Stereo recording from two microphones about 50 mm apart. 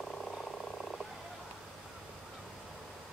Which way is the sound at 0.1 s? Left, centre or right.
Centre.